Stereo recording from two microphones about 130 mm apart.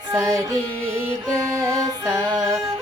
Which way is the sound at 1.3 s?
25° right (ahead or behind).